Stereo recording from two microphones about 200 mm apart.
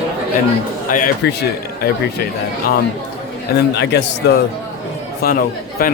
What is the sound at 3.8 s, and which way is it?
Speech, 55° left (ahead or behind).